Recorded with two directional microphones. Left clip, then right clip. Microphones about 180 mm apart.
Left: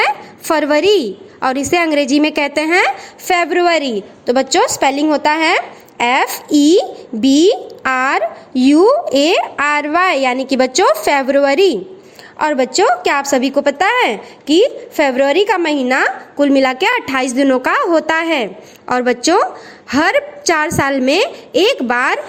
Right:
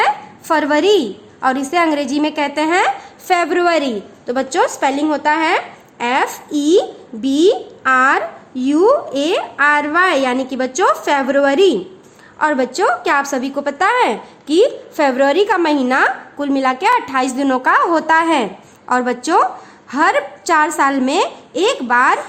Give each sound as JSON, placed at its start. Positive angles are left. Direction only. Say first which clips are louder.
{"t": 0.0, "sound": "a woman's voice", "louder": "even", "side_deg": 25}